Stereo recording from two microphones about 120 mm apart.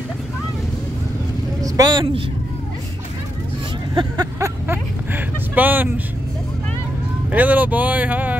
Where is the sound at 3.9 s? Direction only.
40° right (ahead or behind).